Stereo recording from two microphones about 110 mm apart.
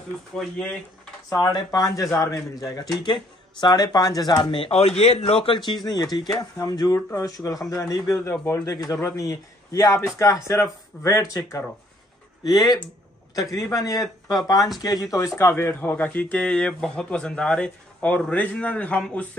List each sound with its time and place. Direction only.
0.4 s speech: 5° left (ahead or behind)
1.4 s speech: 35° left (ahead or behind)
4.3 s a man's voice: 50° left (ahead or behind)
6.1 s a man's voice: 35° left (ahead or behind)
8.2 s speech: 15° left (ahead or behind)
8.6 s a man's voice: 35° left (ahead or behind); by 19.2 s 10° left (ahead or behind)